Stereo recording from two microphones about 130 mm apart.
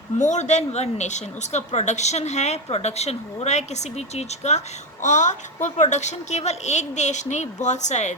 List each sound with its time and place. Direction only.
0.2 s a woman's voice: 65° left (ahead or behind)